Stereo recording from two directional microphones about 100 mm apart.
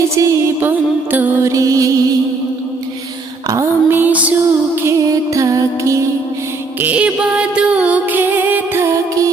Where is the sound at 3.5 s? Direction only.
25° right (ahead or behind).